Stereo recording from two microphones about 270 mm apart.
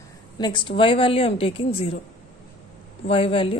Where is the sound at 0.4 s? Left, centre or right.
Centre.